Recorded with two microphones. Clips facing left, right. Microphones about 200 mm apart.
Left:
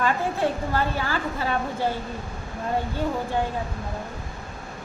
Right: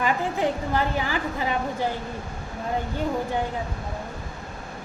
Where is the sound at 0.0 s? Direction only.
15° right (ahead or behind).